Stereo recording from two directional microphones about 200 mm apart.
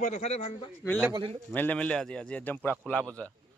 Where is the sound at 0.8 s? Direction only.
Centre (ahead or behind).